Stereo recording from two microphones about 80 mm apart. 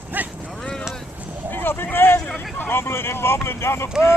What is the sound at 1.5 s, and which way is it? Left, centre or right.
Vehicle, left.